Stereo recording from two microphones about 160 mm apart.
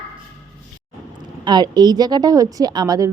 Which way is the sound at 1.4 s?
25° right (ahead or behind).